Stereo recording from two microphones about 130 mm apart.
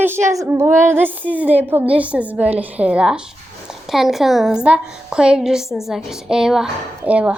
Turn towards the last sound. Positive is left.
turn(degrees=-10)  # may be behind; listen again after turning